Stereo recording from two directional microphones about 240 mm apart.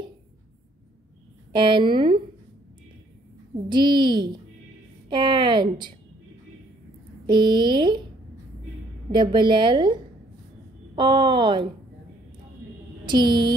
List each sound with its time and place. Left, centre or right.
1.5 s a woman's voice: centre
3.6 s a woman's voice: centre
7.2 s a woman's voice: centre
9.1 s a woman's voice: centre
11.0 s a woman's voice: centre
13.0 s a sound: centre